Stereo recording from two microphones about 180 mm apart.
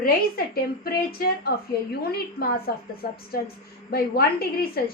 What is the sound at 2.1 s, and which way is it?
A woman's voice, 55° left (ahead or behind).